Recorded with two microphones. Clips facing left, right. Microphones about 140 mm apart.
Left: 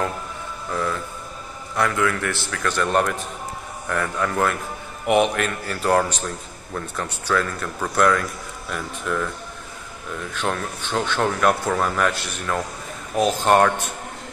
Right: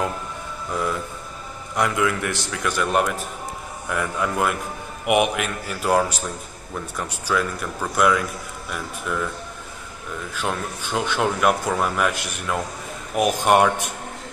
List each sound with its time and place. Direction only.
1.8 s a man's voice: 20° right (ahead or behind)
10.3 s a man's voice: 10° right (ahead or behind)